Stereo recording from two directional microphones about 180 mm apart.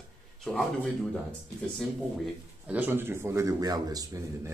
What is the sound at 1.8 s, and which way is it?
A man's voice, 5° right (ahead or behind).